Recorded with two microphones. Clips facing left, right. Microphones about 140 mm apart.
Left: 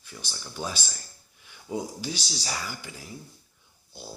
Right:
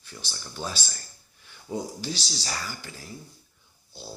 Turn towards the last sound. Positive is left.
turn(degrees=15)  # may be behind; listen again after turning